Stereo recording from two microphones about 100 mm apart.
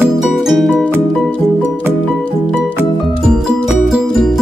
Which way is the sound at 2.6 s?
Centre (ahead or behind).